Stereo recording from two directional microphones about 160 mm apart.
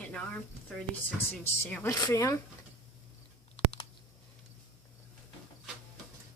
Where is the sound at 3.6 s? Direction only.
35° left (ahead or behind).